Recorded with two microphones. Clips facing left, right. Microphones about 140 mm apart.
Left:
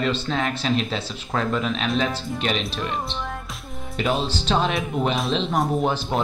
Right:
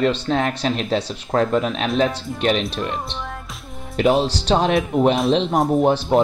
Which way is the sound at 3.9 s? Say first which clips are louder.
Right 7 dB; 65° right (ahead or behind).